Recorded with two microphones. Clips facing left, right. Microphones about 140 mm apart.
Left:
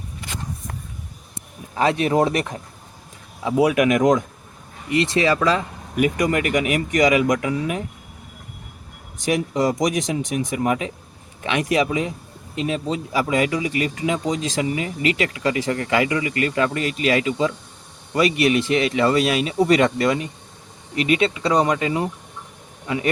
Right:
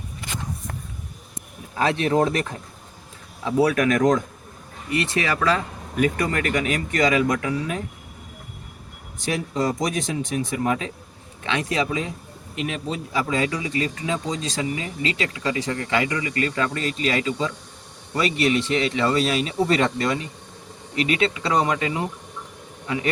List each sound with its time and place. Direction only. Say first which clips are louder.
1.7 s speech: left 2 dB; 20° left (ahead or behind)
9.2 s speech: left 4 dB; 15° left (ahead or behind)
15.0 s speech: left 4 dB; 25° right (ahead or behind)
15.7 s speech: left 4 dB; 25° left (ahead or behind)
16.8 s speech: left 3 dB; 30° right (ahead or behind)
17.2 s speech: left 4 dB; 15° left (ahead or behind)
18.2 s speech: left 3 dB; 30° right (ahead or behind)
21.1 s speech: left 4 dB; 25° left (ahead or behind)